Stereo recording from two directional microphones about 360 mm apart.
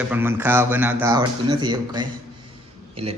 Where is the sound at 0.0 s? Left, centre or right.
Centre.